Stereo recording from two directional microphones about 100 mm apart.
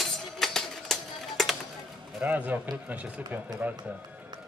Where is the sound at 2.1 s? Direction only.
15° right (ahead or behind).